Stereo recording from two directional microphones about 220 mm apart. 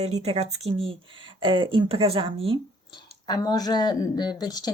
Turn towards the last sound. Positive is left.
turn(degrees=15)  # may be behind; listen again after turning